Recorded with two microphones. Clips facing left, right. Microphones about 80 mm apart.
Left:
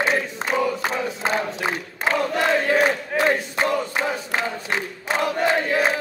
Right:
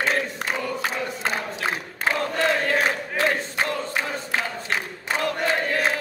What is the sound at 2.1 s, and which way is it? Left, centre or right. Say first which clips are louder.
Crowd: left 4 dB; centre.